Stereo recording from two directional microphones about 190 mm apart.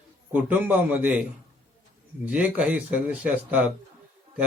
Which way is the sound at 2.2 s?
5° right (ahead or behind).